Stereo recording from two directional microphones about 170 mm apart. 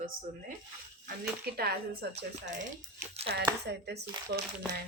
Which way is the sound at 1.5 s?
65° right (ahead or behind).